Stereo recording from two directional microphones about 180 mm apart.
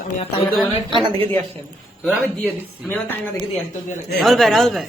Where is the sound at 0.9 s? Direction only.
30° right (ahead or behind).